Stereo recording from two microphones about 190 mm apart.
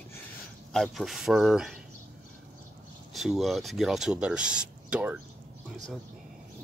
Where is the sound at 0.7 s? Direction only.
Centre (ahead or behind).